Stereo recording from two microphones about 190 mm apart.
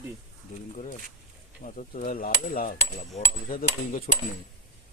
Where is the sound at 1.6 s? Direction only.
45° left (ahead or behind).